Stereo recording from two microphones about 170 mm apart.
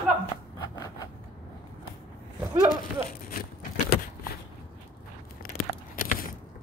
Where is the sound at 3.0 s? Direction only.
60° left (ahead or behind).